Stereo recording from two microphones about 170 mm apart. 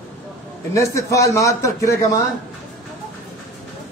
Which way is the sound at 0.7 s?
20° left (ahead or behind).